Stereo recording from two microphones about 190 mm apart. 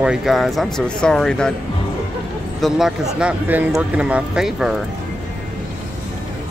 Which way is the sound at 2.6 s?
Centre (ahead or behind).